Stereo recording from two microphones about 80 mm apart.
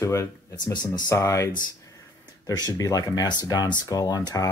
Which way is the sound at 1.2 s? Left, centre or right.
Left.